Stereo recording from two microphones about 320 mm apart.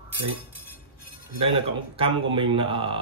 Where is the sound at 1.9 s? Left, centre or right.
Centre.